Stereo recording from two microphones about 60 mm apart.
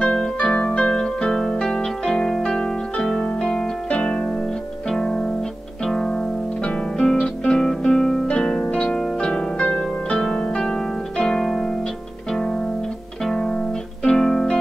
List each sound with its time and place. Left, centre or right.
0.0 s music: centre
0.7 s harp: centre
4.8 s music: centre
8.6 s harp: centre
12.3 s music: centre